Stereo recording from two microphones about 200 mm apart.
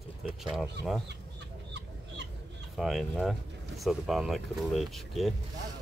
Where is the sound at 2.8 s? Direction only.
Centre (ahead or behind).